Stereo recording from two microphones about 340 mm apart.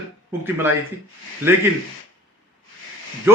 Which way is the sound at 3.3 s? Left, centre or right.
Centre.